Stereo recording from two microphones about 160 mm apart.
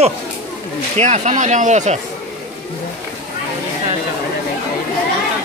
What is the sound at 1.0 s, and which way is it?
Speech, 45° right (ahead or behind).